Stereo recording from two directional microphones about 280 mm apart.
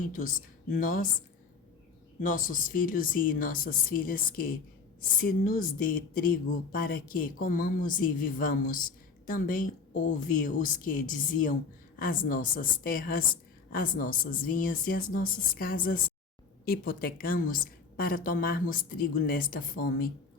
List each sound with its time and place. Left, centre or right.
0.0 s speech: left
2.2 s a woman's voice: left